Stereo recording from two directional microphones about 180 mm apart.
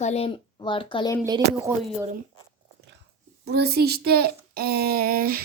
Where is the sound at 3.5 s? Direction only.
60° right (ahead or behind).